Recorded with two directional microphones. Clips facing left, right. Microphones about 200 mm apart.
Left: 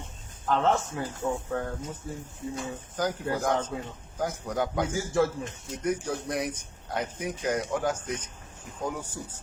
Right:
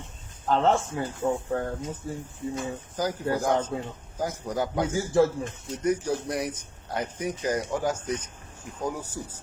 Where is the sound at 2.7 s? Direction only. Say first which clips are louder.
Right 1 dB; 10° right (ahead or behind).